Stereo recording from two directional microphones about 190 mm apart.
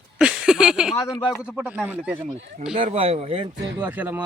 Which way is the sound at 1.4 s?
5° right (ahead or behind).